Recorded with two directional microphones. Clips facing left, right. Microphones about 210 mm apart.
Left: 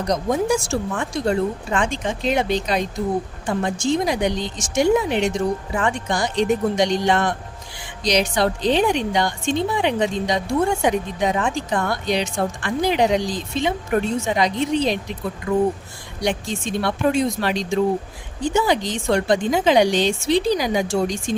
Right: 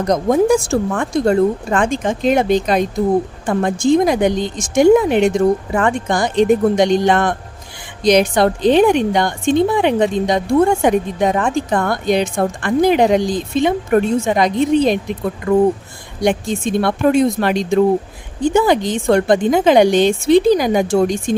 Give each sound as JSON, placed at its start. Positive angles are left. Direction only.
{"t": 0.0, "sound": "a woman's voice", "side_deg": -50}